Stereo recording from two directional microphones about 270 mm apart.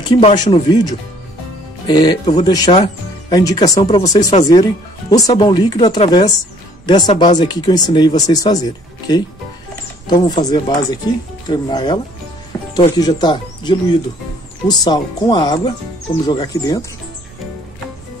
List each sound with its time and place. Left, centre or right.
0.1 s speech: centre